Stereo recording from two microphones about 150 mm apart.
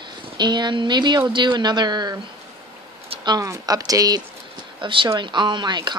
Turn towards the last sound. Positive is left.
turn(degrees=-30)  # may be behind; listen again after turning